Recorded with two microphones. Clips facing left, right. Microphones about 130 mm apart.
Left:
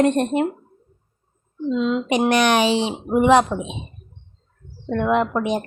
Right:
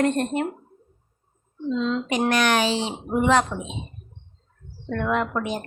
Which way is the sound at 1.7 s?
15° left (ahead or behind).